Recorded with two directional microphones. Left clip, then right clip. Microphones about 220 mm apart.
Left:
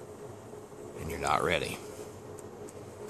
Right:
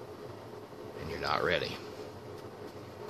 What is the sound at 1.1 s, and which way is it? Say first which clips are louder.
Speech: left 2 dB; 25° left (ahead or behind).